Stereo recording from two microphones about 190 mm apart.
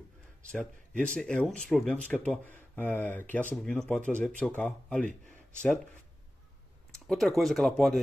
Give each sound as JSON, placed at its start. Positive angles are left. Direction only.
{"t": 0.5, "sound": "speech", "side_deg": 5}
{"t": 7.1, "sound": "speech", "side_deg": 0}